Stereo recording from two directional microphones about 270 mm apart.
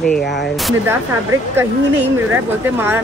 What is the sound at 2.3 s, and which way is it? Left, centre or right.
Speech, centre.